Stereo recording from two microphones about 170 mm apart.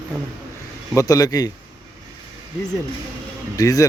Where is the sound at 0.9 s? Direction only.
20° left (ahead or behind).